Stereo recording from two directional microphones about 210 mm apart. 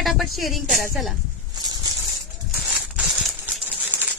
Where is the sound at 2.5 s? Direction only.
Centre (ahead or behind).